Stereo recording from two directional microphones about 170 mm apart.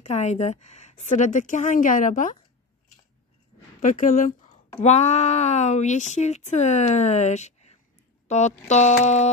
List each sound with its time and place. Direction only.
0.0 s speech: 40° left (ahead or behind)
3.8 s speech: 50° left (ahead or behind)